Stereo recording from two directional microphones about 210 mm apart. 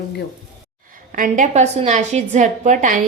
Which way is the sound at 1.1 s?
40° right (ahead or behind).